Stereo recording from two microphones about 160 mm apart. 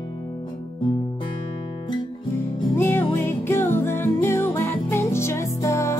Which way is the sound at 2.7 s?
15° left (ahead or behind).